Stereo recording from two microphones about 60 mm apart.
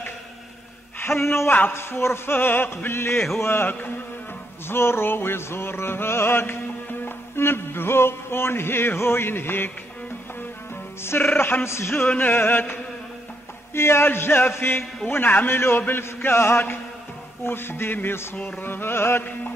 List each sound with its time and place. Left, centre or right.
0.9 s speech: left
1.7 s music: left
11.1 s music: left
12.3 s music: left
13.7 s music: left
15.5 s a man's voice: left
16.0 s music: left